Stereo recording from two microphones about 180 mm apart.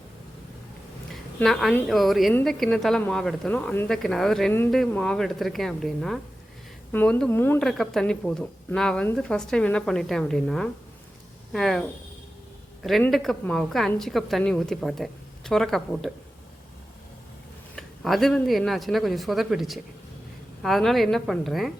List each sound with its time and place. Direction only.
1.1 s a sound: centre (ahead or behind)
1.9 s a woman's voice: centre (ahead or behind)
17.7 s a woman's voice: centre (ahead or behind)